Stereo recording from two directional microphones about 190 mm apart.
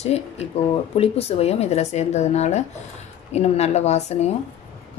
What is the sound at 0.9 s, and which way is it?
A woman's voice, 30° left (ahead or behind).